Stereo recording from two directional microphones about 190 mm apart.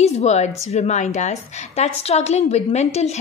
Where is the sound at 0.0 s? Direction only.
35° left (ahead or behind).